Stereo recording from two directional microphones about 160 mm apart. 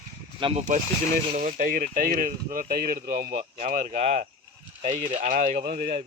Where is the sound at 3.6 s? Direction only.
50° right (ahead or behind); by 5.8 s 70° right (ahead or behind).